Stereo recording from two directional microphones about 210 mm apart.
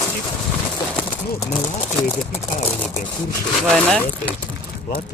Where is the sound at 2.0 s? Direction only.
10° left (ahead or behind).